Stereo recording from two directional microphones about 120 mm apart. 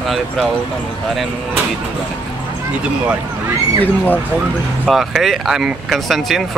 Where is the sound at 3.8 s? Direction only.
15° left (ahead or behind).